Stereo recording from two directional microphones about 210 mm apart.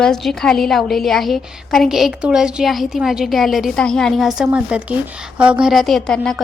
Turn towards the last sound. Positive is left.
turn(degrees=0)  # may be behind; listen again after turning